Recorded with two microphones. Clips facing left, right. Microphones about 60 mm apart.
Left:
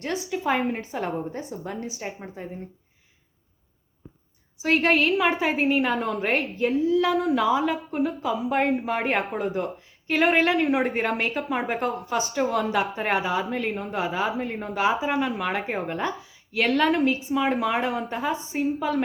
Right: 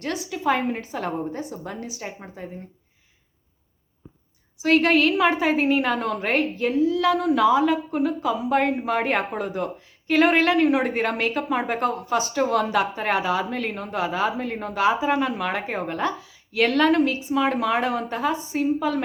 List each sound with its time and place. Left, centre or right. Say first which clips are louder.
0.0 s a woman's voice: right 2 dB; left
2.1 s a woman's voice: left 1 dB; centre
4.6 s a woman's voice: right 3 dB; centre